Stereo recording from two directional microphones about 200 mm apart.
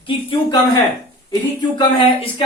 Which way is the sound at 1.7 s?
25° left (ahead or behind).